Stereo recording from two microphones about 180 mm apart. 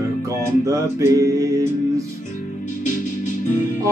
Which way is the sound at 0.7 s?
20° right (ahead or behind).